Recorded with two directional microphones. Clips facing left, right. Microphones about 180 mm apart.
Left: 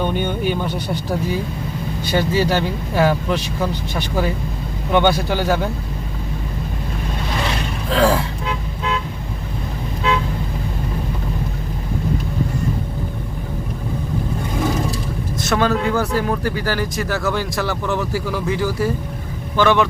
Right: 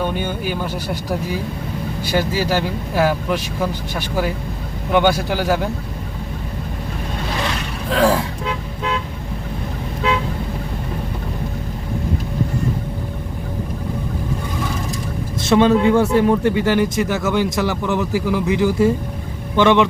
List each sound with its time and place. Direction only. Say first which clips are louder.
0.0 s speech: left 2 dB; 5° right (ahead or behind)
7.9 s speech: even; 15° right (ahead or behind)
15.4 s speech: right 6 dB; 25° right (ahead or behind)